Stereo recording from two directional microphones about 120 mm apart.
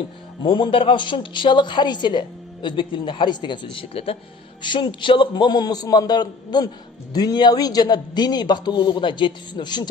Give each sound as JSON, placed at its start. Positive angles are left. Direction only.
{"t": 0.4, "sound": "a woman's voice", "side_deg": 45}